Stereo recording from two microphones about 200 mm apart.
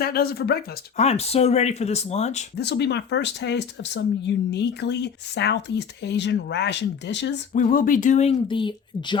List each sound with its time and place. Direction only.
0.0 s speech: 50° left (ahead or behind)
0.9 s speech: 30° left (ahead or behind)
2.6 s speech: 55° left (ahead or behind)
7.5 s speech: 40° left (ahead or behind); by 9.1 s 25° left (ahead or behind)